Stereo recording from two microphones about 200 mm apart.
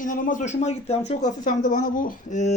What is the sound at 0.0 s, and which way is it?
Speech, 40° left (ahead or behind).